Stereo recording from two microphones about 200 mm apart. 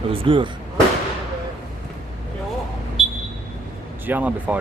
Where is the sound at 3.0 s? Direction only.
Centre (ahead or behind).